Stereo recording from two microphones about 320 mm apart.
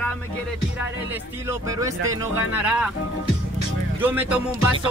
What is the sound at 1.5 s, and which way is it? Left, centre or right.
Speech, centre.